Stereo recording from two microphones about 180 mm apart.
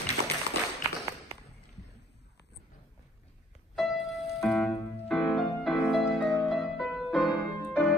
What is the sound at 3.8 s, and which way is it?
Music, centre (ahead or behind).